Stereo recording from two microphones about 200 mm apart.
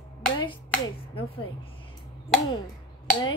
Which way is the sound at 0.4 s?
25° left (ahead or behind).